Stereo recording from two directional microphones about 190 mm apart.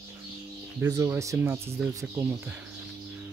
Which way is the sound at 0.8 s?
15° right (ahead or behind).